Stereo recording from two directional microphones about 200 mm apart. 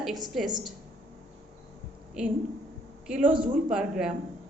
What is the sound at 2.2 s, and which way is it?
A woman's voice, 5° right (ahead or behind).